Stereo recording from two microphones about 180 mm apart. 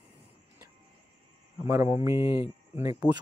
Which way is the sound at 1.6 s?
15° right (ahead or behind).